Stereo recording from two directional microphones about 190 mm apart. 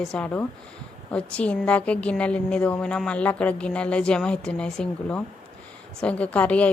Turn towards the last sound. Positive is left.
turn(degrees=5)  # may be behind; listen again after turning